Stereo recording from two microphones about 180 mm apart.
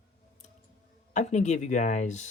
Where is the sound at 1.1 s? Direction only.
40° left (ahead or behind).